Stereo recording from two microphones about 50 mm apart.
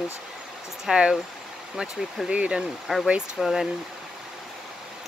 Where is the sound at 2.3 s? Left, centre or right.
Right.